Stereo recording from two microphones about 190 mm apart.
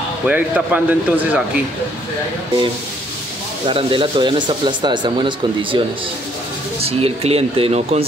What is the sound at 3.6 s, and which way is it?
Speech, 25° right (ahead or behind).